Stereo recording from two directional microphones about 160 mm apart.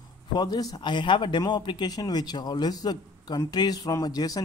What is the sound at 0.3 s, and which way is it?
Speech, 25° left (ahead or behind).